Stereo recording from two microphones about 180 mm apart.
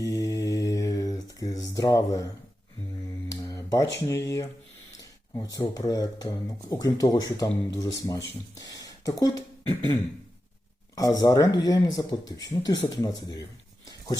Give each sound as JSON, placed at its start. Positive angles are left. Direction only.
{"t": 0.0, "sound": "mantra", "side_deg": 20}
{"t": 3.4, "sound": "a sound", "side_deg": 15}
{"t": 3.9, "sound": "speech", "side_deg": 15}